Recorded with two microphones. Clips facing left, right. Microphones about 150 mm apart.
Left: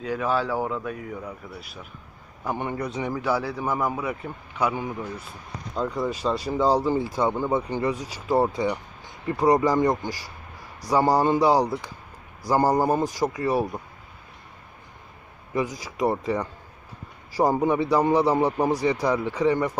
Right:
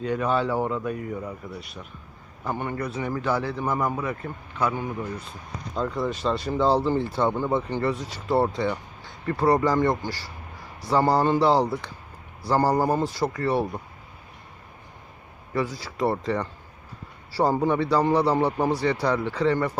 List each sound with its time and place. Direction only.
0.0 s speech: centre (ahead or behind)
2.4 s speech: 15° left (ahead or behind)
15.5 s speech: 15° left (ahead or behind)